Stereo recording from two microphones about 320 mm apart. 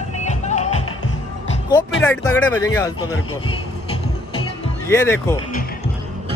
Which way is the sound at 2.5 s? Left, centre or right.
Centre.